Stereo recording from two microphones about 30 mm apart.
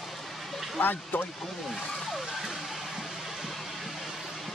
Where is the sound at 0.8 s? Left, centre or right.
Left.